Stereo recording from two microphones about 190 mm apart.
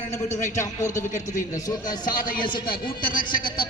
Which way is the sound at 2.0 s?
45° left (ahead or behind).